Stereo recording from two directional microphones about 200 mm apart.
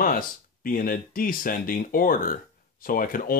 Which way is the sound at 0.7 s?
45° left (ahead or behind).